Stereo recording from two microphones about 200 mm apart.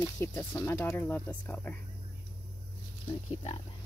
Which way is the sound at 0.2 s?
10° left (ahead or behind).